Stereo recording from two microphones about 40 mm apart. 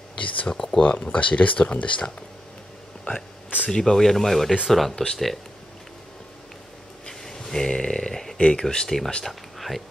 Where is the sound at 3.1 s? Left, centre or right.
Left.